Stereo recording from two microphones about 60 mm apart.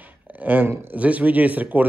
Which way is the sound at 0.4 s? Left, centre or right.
Right.